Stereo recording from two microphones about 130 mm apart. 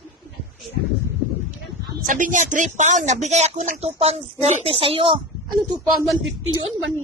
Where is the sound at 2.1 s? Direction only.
85° right; by 5.1 s 45° right (ahead or behind).